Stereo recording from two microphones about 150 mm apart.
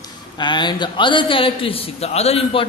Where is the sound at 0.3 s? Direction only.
30° left (ahead or behind).